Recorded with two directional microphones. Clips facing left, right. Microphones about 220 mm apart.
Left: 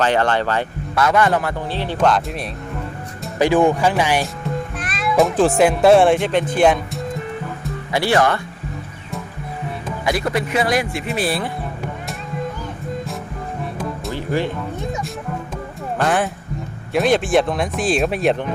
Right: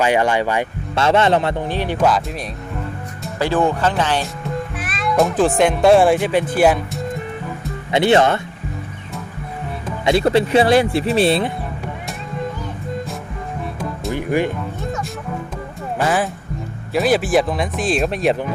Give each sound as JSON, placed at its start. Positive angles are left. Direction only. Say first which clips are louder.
{"t": 0.0, "sound": "speech", "louder": "right 1 dB", "side_deg": -10}
{"t": 0.9, "sound": "a man's voice", "louder": "right 2 dB", "side_deg": -25}
{"t": 3.3, "sound": "speech", "louder": "left 3 dB", "side_deg": 15}
{"t": 4.8, "sound": "speech", "louder": "left 1 dB", "side_deg": 0}
{"t": 7.9, "sound": "a man's voice", "louder": "right 3 dB", "side_deg": -20}
{"t": 10.1, "sound": "a man's voice", "louder": "right 6 dB", "side_deg": -25}
{"t": 14.1, "sound": "speech", "louder": "right 3 dB", "side_deg": -15}
{"t": 16.0, "sound": "speech", "louder": "even", "side_deg": 0}